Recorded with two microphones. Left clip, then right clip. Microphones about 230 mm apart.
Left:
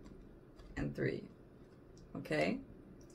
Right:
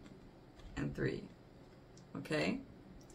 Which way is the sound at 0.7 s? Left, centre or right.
Centre.